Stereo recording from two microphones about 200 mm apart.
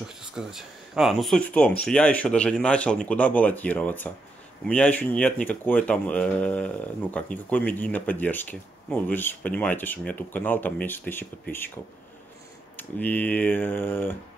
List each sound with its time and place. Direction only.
0.2 s speech: 5° right (ahead or behind)
13.0 s speech: 10° left (ahead or behind)